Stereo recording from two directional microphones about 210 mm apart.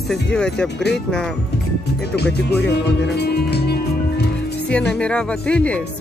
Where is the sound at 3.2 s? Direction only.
50° left (ahead or behind).